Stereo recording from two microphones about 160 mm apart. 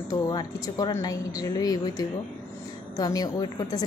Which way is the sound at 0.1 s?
25° left (ahead or behind).